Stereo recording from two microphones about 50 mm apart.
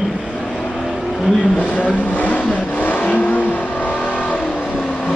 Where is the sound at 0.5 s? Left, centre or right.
Centre.